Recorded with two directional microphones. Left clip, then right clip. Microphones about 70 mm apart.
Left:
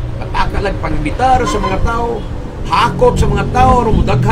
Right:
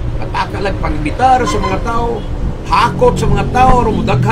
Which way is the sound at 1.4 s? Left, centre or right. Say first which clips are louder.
Even; right.